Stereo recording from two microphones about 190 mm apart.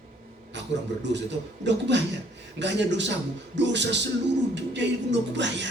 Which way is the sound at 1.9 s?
70° right (ahead or behind).